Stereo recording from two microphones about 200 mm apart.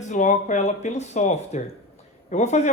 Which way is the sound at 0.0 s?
40° left (ahead or behind).